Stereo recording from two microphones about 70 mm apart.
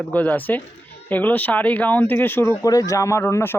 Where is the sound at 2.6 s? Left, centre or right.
Left.